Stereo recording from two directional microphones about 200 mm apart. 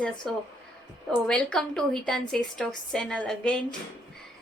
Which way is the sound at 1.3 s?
5° left (ahead or behind).